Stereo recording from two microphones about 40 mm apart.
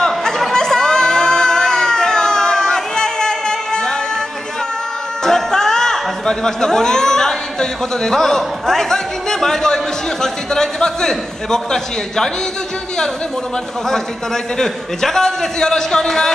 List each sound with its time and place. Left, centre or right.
0.5 s a sound: centre
5.2 s music: centre
10.2 s a man's voice: centre
13.8 s a man's voice: centre